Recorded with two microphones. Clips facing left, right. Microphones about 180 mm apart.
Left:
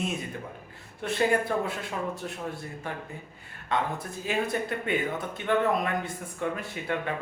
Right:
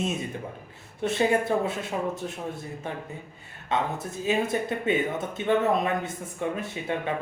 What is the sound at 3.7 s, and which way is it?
Speech, 20° right (ahead or behind).